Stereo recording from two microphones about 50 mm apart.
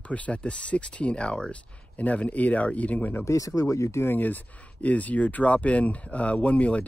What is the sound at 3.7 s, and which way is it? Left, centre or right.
Speech, left.